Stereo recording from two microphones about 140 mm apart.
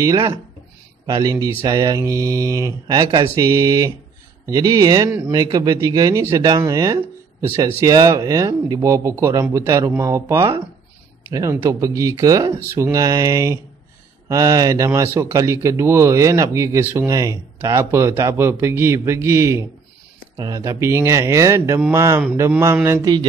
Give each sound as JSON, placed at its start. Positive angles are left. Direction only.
{"t": 0.0, "sound": "a man's voice", "side_deg": -25}